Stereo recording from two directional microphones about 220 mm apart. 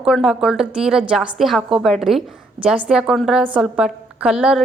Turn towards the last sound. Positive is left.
turn(degrees=-5)  # may be behind; listen again after turning